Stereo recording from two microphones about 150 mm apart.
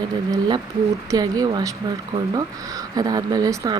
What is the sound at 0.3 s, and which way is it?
Speech, 30° right (ahead or behind).